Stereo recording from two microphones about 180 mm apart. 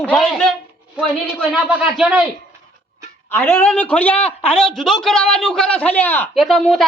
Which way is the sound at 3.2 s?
10° left (ahead or behind).